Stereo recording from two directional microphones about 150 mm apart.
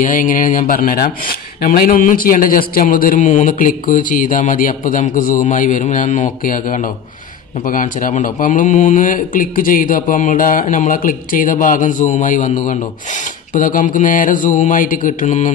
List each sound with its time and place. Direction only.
0.0 s speech: 65° left (ahead or behind)